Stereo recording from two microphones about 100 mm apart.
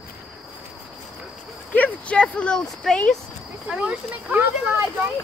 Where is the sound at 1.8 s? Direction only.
10° left (ahead or behind).